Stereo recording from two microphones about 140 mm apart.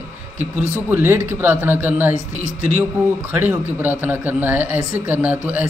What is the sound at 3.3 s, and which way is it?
Speech, 15° right (ahead or behind).